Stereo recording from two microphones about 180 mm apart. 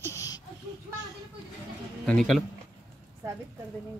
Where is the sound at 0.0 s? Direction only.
20° left (ahead or behind).